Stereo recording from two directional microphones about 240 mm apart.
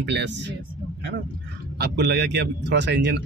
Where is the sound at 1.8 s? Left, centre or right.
Right.